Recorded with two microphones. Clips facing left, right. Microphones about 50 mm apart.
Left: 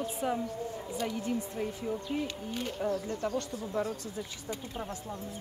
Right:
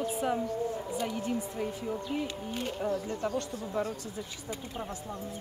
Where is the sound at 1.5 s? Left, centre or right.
Centre.